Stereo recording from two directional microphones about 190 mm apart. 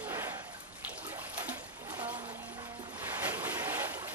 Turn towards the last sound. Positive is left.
turn(degrees=-10)  # may be behind; listen again after turning